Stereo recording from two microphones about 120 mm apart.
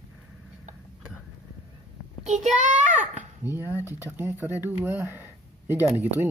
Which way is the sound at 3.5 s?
15° right (ahead or behind).